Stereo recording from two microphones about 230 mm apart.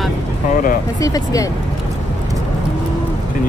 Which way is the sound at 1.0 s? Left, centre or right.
Centre.